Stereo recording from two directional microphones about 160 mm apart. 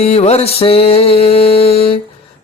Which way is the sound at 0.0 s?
40° left (ahead or behind).